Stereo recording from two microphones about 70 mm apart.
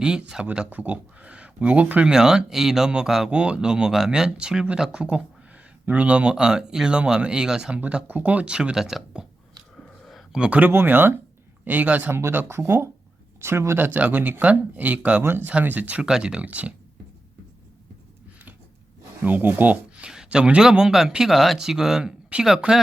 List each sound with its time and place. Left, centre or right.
0.0 s speech: centre
2.1 s speech: centre
10.0 s a sound: centre
10.3 s speech: centre
10.7 s speech: right
12.1 s speech: right
15.2 s speech: right
15.4 s speech: right
16.0 s speech: centre
19.2 s speech: right
20.1 s speech: centre